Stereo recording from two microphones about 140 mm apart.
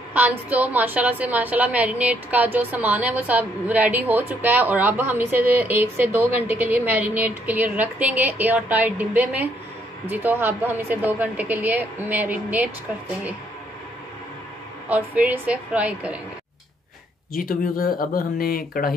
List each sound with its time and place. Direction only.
0.1 s a woman's voice: 10° right (ahead or behind)
14.9 s a woman's voice: 10° right (ahead or behind)
17.3 s speech: 85° left